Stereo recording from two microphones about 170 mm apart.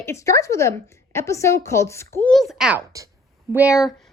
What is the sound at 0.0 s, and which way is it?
A woman's voice, 15° left (ahead or behind).